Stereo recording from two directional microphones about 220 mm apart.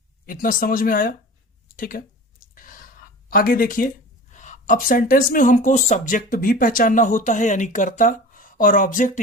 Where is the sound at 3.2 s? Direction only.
40° left (ahead or behind).